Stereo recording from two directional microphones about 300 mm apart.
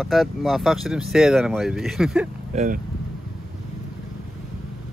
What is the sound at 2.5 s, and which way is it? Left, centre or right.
Speech, right.